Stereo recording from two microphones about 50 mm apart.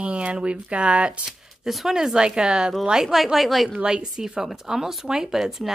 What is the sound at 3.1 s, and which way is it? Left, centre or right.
Speech, centre.